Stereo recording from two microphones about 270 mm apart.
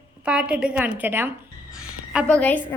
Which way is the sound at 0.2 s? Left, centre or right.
Centre.